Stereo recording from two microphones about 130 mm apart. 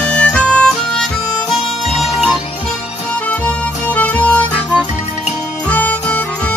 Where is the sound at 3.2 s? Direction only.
10° left (ahead or behind).